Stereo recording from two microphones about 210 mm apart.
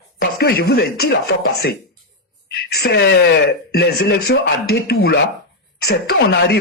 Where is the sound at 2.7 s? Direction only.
50° left (ahead or behind).